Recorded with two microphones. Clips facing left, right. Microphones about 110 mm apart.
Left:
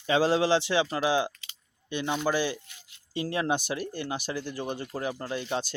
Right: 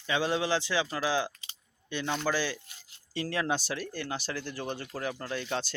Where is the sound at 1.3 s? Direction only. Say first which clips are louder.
Left 4 dB; 30° right (ahead or behind).